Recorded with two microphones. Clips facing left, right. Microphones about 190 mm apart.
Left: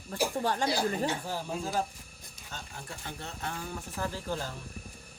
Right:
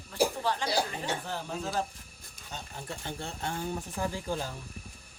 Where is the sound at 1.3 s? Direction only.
10° left (ahead or behind).